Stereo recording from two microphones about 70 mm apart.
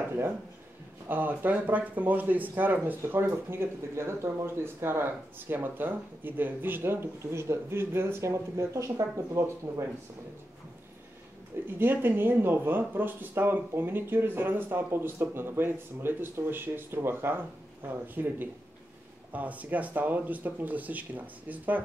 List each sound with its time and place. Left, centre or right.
1.0 s speech: right
3.3 s speech: right
11.6 s speech: right